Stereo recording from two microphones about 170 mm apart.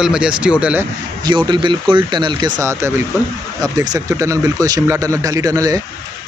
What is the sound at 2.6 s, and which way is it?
Speech, 15° right (ahead or behind).